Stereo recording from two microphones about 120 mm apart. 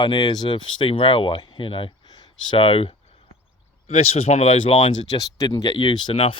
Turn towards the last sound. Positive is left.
turn(degrees=45)  # may be behind; listen again after turning